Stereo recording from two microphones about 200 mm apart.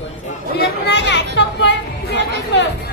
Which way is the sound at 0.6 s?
60° left (ahead or behind).